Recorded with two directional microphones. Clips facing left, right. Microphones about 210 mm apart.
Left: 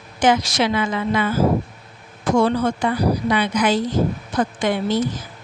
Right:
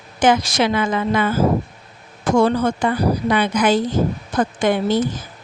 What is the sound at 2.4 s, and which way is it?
A woman's voice, 45° right (ahead or behind).